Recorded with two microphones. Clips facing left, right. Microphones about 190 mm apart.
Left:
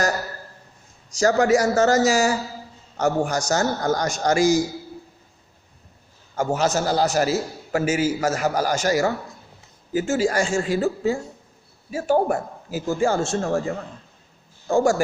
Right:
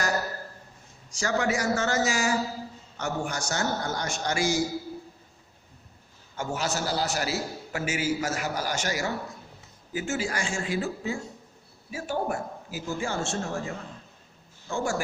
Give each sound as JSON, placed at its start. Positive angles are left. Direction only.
{"t": 1.1, "sound": "a man's voice", "side_deg": 40}
{"t": 6.3, "sound": "a man's voice", "side_deg": 40}
{"t": 14.7, "sound": "a man's voice", "side_deg": 45}